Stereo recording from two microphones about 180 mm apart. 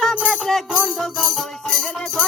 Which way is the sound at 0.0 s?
Centre (ahead or behind).